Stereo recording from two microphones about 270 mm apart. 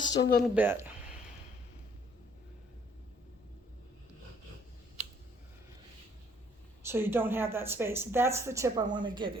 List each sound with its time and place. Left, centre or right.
0.0 s speech: centre
0.5 s speech: centre
6.8 s speech: centre